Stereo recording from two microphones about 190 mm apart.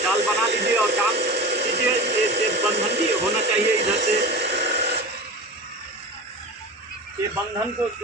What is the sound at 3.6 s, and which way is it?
Speech, 60° right (ahead or behind).